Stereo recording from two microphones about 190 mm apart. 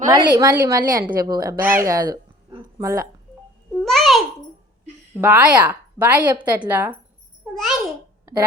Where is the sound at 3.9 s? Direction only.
Centre (ahead or behind).